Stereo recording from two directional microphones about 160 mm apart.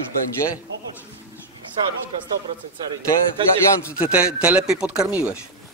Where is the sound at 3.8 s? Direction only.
10° right (ahead or behind).